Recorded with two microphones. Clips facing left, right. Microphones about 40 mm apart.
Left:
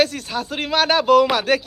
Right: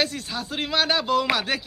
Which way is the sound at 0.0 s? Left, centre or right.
Left.